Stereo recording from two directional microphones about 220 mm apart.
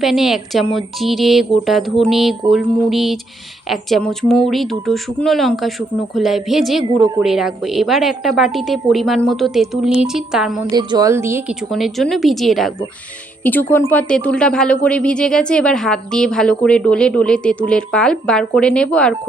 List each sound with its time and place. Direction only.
0.0 s a woman's voice: centre (ahead or behind)
6.8 s speech: 15° right (ahead or behind)
7.2 s a woman's voice: centre (ahead or behind)
10.8 s speech: 20° right (ahead or behind)
11.7 s a woman's voice: centre (ahead or behind)